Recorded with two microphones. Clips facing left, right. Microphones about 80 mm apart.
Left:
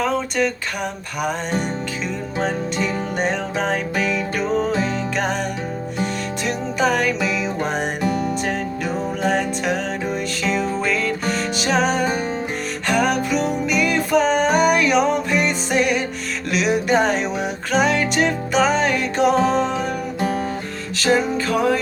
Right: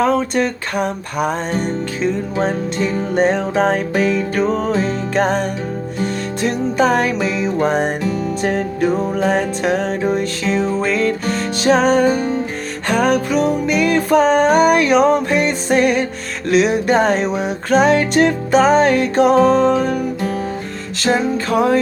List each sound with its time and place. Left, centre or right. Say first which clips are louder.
0.0 s music: right 5 dB; right
2.4 s music: right 2 dB; right
21.0 s music: right 1 dB; right